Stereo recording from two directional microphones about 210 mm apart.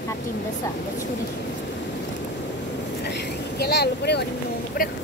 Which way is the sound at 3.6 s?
50° left (ahead or behind).